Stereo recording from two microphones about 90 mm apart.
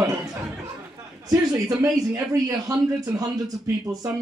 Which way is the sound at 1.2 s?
45° right (ahead or behind).